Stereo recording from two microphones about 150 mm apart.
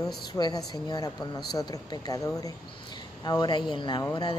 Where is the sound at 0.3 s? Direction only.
25° left (ahead or behind).